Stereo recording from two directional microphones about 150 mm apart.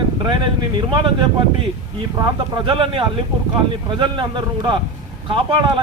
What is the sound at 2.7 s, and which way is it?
Speech, 35° right (ahead or behind).